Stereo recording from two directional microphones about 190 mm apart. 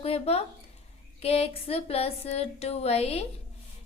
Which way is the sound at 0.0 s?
35° left (ahead or behind).